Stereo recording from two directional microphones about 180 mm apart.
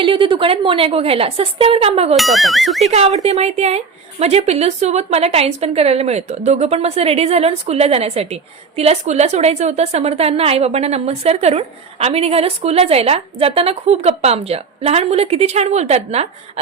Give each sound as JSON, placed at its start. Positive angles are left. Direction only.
{"t": 0.0, "sound": "a woman's voice", "side_deg": -30}
{"t": 2.1, "sound": "speech", "side_deg": 0}
{"t": 2.9, "sound": "a woman's voice", "side_deg": -35}